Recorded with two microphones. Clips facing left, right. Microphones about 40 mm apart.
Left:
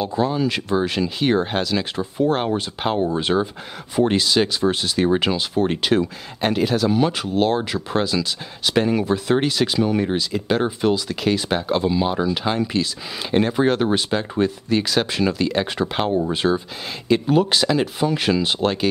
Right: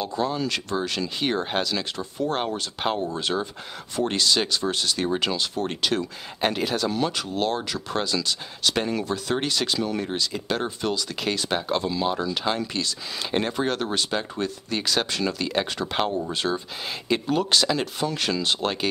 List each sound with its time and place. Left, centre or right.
0.0 s speech: centre
1.2 s speech: centre
6.4 s speech: centre
15.6 s speech: centre